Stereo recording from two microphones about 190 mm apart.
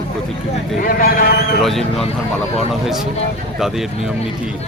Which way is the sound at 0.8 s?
50° left (ahead or behind).